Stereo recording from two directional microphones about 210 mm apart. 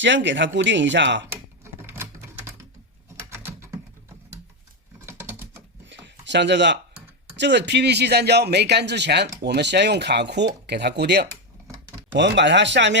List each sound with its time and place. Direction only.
0.0 s speech: 60° right (ahead or behind)
1.3 s typewriter: 10° right (ahead or behind)
3.2 s a sound: 10° right (ahead or behind)
4.9 s typing: 10° right (ahead or behind)
5.8 s a sound: 60° right (ahead or behind)
7.3 s speech: 55° right (ahead or behind)